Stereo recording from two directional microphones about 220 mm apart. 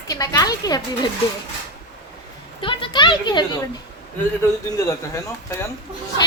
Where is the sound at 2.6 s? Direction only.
20° left (ahead or behind).